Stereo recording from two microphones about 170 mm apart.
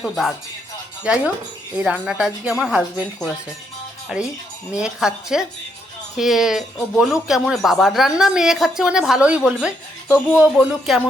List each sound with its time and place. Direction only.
0.0 s speech: centre (ahead or behind)